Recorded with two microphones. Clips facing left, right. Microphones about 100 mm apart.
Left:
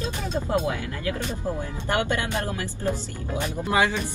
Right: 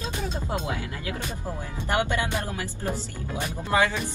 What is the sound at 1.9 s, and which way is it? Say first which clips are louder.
Speech: even; 20° right (ahead or behind).